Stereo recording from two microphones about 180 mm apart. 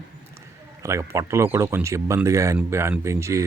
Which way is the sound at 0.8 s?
15° right (ahead or behind).